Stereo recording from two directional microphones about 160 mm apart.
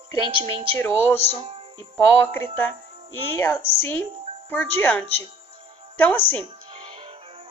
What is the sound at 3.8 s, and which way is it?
A woman's voice, 10° left (ahead or behind).